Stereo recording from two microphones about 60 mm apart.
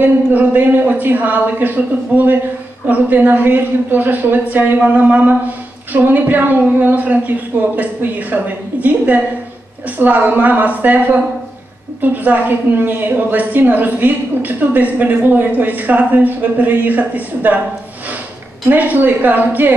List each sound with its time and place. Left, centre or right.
0.0 s a woman's voice: right
18.7 s a woman's voice: right